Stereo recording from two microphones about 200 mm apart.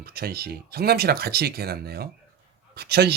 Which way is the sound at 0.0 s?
50° right (ahead or behind).